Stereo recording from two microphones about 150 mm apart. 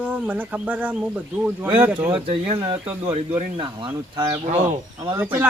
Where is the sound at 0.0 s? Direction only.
10° right (ahead or behind).